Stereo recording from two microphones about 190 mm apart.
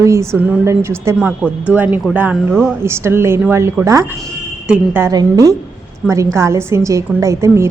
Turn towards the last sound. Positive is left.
turn(degrees=-15)  # may be behind; listen again after turning